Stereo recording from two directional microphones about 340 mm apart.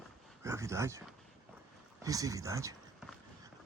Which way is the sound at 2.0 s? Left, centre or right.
Centre.